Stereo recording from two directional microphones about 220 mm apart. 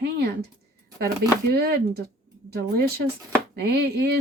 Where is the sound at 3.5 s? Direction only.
50° right (ahead or behind).